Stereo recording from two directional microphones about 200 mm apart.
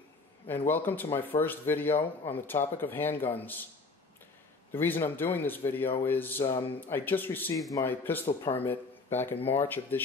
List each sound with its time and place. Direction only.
0.7 s speech: 10° left (ahead or behind)
4.7 s speech: 10° left (ahead or behind)